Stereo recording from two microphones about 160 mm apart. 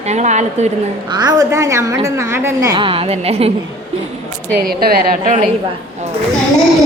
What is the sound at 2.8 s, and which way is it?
Speech, 35° right (ahead or behind).